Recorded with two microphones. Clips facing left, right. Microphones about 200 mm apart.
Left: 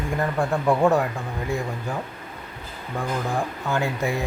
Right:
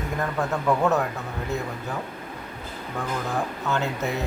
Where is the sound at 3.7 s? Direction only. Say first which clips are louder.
Left 3 dB; 10° left (ahead or behind).